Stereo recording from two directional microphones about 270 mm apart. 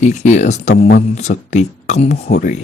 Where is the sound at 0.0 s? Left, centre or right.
Left.